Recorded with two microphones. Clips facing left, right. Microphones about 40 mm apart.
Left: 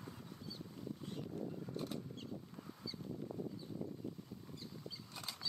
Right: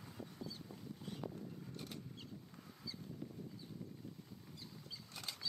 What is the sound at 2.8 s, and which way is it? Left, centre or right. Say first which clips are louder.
Goose: left 4 dB; centre.